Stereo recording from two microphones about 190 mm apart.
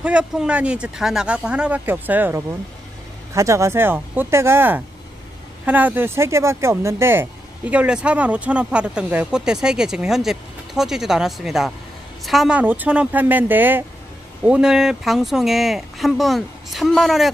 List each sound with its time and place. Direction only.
0.0 s speech: 5° right (ahead or behind)